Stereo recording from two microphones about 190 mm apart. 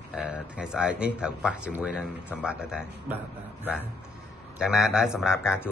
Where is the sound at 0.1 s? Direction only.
5° right (ahead or behind).